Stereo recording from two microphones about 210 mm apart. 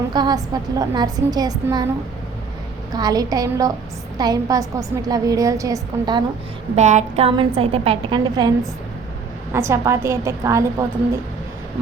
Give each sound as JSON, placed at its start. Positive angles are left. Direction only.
{"t": 0.1, "sound": "a woman's voice", "side_deg": -20}
{"t": 2.9, "sound": "a woman's voice", "side_deg": -20}
{"t": 6.7, "sound": "a woman's voice", "side_deg": -35}